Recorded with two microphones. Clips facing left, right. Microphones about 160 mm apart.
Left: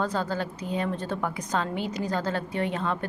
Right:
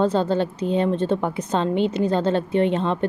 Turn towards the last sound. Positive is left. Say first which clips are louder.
# right 8 dB
turn(degrees=-25)  # may be behind; listen again after turning